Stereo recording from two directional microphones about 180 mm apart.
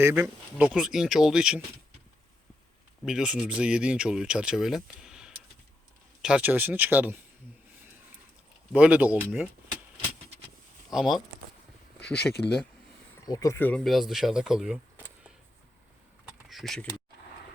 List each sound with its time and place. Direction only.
0.0 s speech: 10° right (ahead or behind)
3.0 s speech: 5° right (ahead or behind)
8.7 s speech: 5° right (ahead or behind)
10.8 s speech: centre (ahead or behind)
12.1 s speech: 65° left (ahead or behind)
13.2 s speech: 20° left (ahead or behind); by 15.0 s 5° right (ahead or behind)
16.5 s speech: centre (ahead or behind)